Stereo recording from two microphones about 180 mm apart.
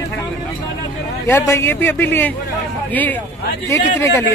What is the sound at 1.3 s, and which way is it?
A man's voice, 10° left (ahead or behind).